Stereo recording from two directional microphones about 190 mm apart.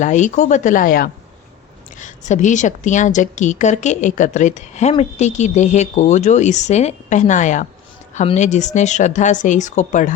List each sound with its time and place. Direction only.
0.0 s a woman's voice: 40° left (ahead or behind)